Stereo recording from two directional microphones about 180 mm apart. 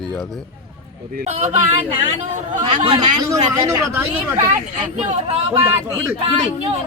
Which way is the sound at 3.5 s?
15° right (ahead or behind).